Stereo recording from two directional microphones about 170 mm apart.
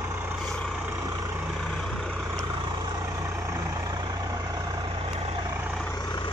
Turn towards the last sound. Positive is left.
turn(degrees=25)  # may be behind; listen again after turning